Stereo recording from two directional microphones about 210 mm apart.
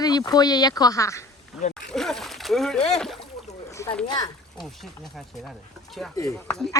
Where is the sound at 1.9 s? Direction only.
Centre (ahead or behind).